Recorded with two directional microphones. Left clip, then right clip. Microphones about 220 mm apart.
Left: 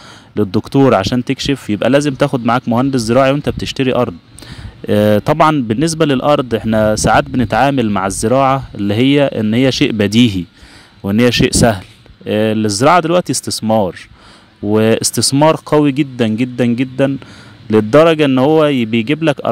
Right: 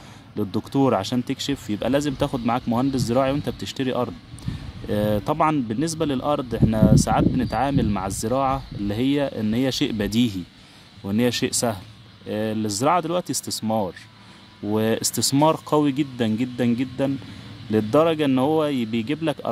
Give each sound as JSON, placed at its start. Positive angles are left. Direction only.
{"t": 0.4, "sound": "a man's voice", "side_deg": 30}